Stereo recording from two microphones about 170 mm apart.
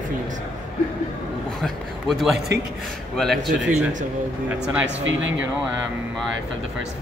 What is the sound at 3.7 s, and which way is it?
Speech, 45° right (ahead or behind).